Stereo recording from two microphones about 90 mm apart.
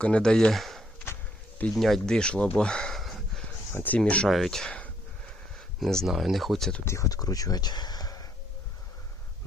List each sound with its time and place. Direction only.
0.0 s speech: 10° left (ahead or behind)
1.7 s a sound: centre (ahead or behind)
3.8 s speech: 15° left (ahead or behind)
4.3 s speech: centre (ahead or behind)
6.8 s speech: 35° left (ahead or behind)